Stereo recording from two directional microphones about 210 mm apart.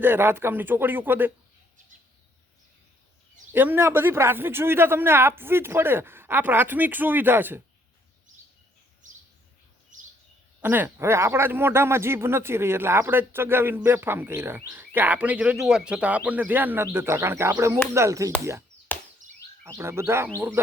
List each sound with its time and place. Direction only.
0.0 s speech: 10° right (ahead or behind)
3.5 s speech: 10° right (ahead or behind)
9.0 s bird vocalization: 35° right (ahead or behind)
10.6 s speech: 10° right (ahead or behind)
18.9 s chop: 10° left (ahead or behind)
19.6 s speech: 10° right (ahead or behind)